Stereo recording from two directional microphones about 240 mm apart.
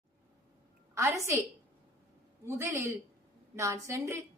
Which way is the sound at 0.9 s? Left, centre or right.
Centre.